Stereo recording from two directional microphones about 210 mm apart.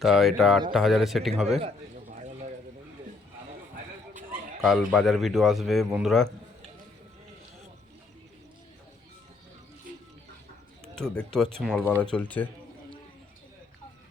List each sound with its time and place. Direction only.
0.0 s a man's voice: centre (ahead or behind)
2.1 s a sound: 35° right (ahead or behind)
4.3 s a man's voice: centre (ahead or behind)
10.9 s a man's voice: 5° left (ahead or behind)
12.1 s speech: 5° left (ahead or behind)